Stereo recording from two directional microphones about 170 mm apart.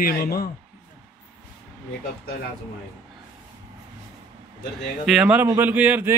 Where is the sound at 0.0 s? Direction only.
65° left (ahead or behind).